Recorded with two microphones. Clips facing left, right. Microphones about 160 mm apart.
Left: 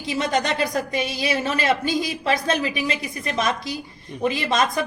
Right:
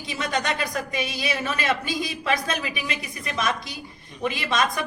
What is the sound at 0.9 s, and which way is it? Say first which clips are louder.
A woman's voice: left 3 dB; 35° left (ahead or behind).